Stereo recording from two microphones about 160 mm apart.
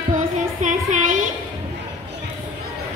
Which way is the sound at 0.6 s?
50° right (ahead or behind).